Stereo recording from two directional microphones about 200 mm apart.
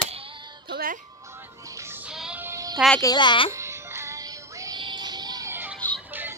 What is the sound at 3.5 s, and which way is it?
Music, 15° right (ahead or behind).